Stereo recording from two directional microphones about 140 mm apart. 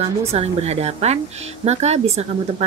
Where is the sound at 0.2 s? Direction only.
50° right (ahead or behind).